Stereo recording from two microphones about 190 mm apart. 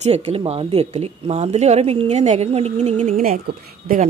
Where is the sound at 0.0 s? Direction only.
35° right (ahead or behind).